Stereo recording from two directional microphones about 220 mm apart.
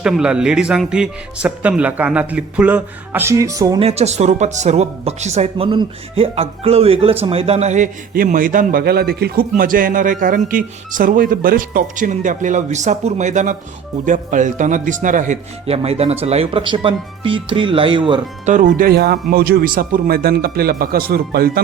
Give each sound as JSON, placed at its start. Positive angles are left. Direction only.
{"t": 0.0, "sound": "speech", "side_deg": -5}
{"t": 18.5, "sound": "speech", "side_deg": -40}